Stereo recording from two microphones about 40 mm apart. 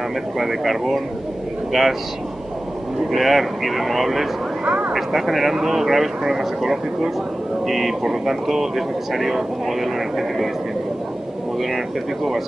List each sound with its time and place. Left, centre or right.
0.4 s speech: centre
3.1 s speech: centre
4.6 s vehicle: right
4.9 s speech: centre